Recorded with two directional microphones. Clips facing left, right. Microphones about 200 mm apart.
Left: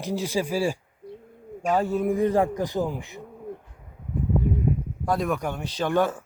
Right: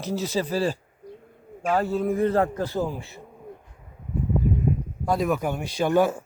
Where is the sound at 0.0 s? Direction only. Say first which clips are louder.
Even; 15° left (ahead or behind).